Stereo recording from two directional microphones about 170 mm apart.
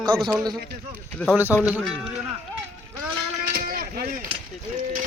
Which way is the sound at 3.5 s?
60° right (ahead or behind).